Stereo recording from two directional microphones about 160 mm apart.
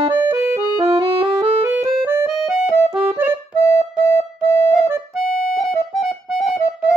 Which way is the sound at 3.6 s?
15° left (ahead or behind).